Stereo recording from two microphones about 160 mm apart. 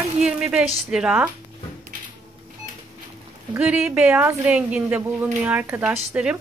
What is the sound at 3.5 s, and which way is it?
Speech, 5° right (ahead or behind).